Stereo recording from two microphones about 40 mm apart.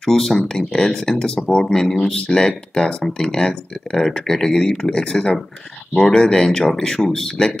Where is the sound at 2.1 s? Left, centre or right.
Left.